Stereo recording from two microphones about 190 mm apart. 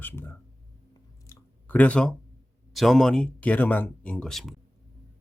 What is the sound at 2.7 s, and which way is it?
Speech, centre (ahead or behind).